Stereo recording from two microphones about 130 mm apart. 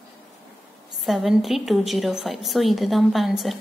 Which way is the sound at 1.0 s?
Centre (ahead or behind).